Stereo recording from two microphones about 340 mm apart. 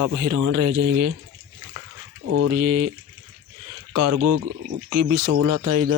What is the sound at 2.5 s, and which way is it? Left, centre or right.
Speech, right.